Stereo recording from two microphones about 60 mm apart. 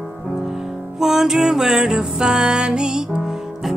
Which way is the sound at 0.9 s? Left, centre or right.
Centre.